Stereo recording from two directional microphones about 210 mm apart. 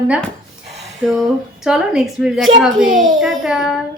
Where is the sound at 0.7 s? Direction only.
30° right (ahead or behind).